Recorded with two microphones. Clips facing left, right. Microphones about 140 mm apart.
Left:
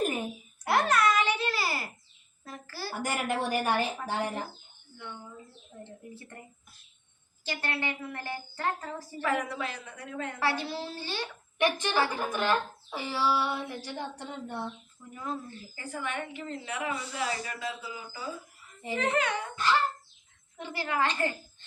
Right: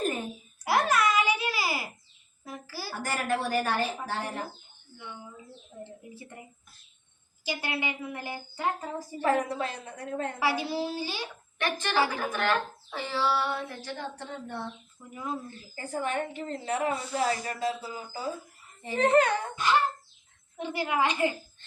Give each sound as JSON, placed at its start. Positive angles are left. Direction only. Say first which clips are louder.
{"t": 0.6, "sound": "babbling", "louder": "even", "side_deg": -5}
{"t": 2.4, "sound": "a sound", "louder": "right 1 dB", "side_deg": -10}
{"t": 3.0, "sound": "speech", "louder": "right 1 dB", "side_deg": 15}
{"t": 4.9, "sound": "a woman's voice", "louder": "even", "side_deg": -10}
{"t": 7.4, "sound": "a woman's voice", "louder": "right 1 dB", "side_deg": -10}
{"t": 9.2, "sound": "a woman's voice", "louder": "right 4 dB", "side_deg": -35}
{"t": 10.4, "sound": "a woman's voice", "louder": "right 2 dB", "side_deg": -10}
{"t": 11.5, "sound": "speech", "louder": "left 1 dB", "side_deg": 15}
{"t": 15.1, "sound": "a woman's voice", "louder": "right 1 dB", "side_deg": -10}
{"t": 15.7, "sound": "a woman's voice", "louder": "right 5 dB", "side_deg": -40}
{"t": 19.6, "sound": "a woman's voice", "louder": "even", "side_deg": -15}